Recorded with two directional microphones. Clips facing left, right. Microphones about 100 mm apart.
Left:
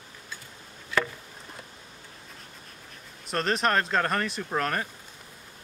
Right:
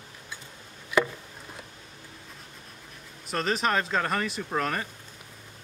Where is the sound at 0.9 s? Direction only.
15° right (ahead or behind).